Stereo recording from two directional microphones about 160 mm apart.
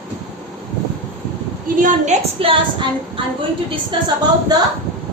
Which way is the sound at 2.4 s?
35° right (ahead or behind).